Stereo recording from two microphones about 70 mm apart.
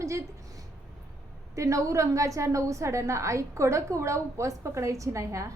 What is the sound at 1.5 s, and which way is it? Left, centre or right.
A woman's voice, right.